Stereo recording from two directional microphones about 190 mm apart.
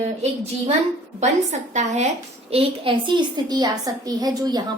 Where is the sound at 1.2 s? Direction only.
35° right (ahead or behind).